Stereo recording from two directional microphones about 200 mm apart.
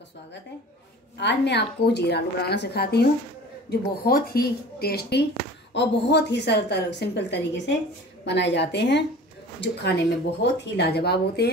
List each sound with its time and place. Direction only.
1.1 s a woman's voice: 60° left (ahead or behind)